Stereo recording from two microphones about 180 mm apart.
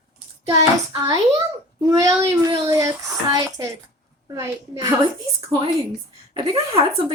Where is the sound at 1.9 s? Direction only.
20° right (ahead or behind).